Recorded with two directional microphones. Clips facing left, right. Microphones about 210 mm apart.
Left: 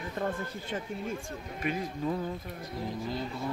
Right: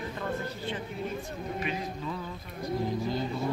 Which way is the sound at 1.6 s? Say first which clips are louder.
Left 6 dB; 50° left (ahead or behind).